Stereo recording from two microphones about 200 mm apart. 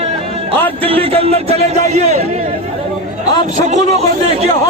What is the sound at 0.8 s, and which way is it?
A man's voice, 30° right (ahead or behind).